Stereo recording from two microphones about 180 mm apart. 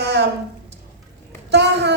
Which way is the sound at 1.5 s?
70° right (ahead or behind).